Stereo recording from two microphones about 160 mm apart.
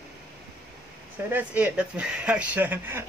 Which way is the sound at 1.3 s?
10° right (ahead or behind).